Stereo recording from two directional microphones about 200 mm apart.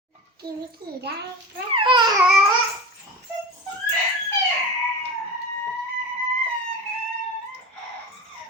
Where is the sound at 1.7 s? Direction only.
25° right (ahead or behind).